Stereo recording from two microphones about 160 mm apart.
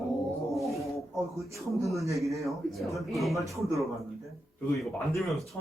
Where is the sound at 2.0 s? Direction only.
20° right (ahead or behind).